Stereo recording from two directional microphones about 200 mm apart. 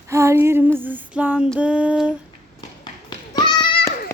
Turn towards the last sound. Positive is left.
turn(degrees=20)  # may be behind; listen again after turning